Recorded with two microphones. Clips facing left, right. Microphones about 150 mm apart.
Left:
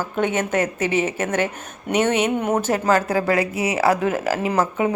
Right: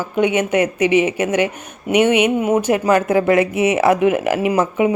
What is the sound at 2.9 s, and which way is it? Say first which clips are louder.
Speech: right 4 dB; 20° right (ahead or behind).